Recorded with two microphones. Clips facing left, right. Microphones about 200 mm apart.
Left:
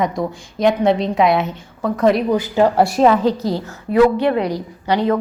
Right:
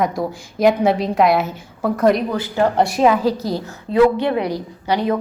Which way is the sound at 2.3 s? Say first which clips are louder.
Left 3 dB; 15° left (ahead or behind).